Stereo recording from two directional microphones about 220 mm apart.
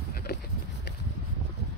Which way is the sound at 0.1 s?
45° left (ahead or behind).